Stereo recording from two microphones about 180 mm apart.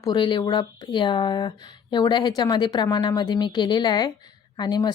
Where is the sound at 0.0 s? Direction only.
25° left (ahead or behind).